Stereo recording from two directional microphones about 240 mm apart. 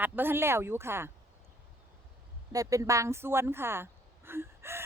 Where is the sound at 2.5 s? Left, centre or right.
Centre.